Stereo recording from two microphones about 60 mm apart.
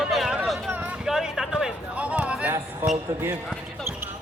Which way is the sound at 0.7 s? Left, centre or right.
Right.